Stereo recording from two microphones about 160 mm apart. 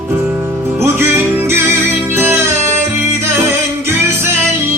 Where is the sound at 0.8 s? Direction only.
15° right (ahead or behind).